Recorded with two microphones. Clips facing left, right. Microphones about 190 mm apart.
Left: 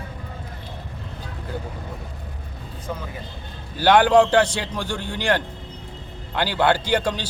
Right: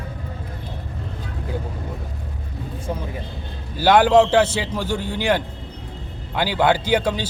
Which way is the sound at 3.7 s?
10° right (ahead or behind).